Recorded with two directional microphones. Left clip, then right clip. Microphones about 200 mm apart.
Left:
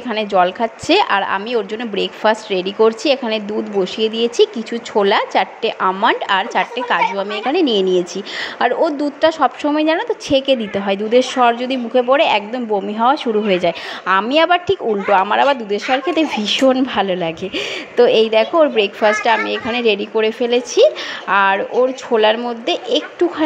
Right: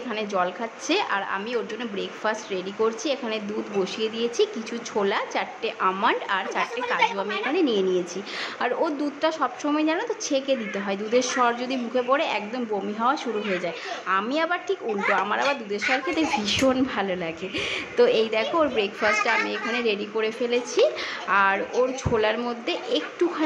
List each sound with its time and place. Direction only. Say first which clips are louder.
0.1 s a woman's voice: left 11 dB; 30° left (ahead or behind)